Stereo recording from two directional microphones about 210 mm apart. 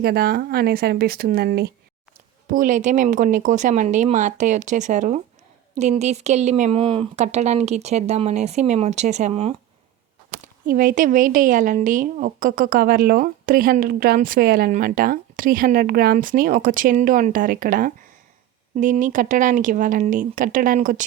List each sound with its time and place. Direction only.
0.0 s a woman's voice: 50° right (ahead or behind); by 9.6 s 30° right (ahead or behind)
10.4 s a woman's voice: 40° right (ahead or behind)